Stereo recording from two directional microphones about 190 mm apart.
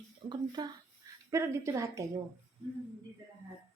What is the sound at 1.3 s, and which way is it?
Speech, 15° right (ahead or behind).